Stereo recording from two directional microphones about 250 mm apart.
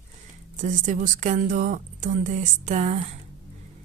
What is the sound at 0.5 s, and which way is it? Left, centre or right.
A woman's voice, right.